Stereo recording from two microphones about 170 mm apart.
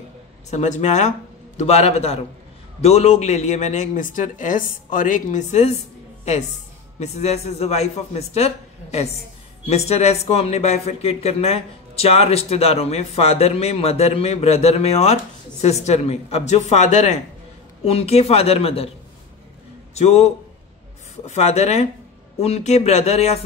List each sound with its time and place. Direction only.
0.5 s speech: 45° left (ahead or behind)
7.0 s speech: 40° left (ahead or behind)
19.9 s a man's voice: 40° left (ahead or behind)